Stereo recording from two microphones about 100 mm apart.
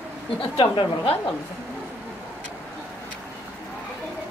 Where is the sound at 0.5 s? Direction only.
55° left (ahead or behind).